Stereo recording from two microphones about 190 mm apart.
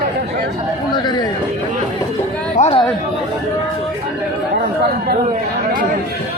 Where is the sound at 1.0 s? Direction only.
20° left (ahead or behind).